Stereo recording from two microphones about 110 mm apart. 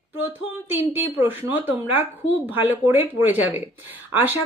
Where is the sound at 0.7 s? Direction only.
20° right (ahead or behind).